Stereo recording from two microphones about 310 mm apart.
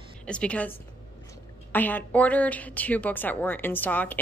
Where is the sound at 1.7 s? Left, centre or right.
Centre.